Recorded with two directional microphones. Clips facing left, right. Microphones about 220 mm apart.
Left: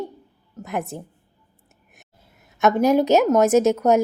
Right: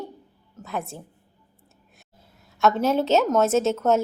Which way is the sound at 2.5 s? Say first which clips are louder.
Left 4 dB; 15° left (ahead or behind).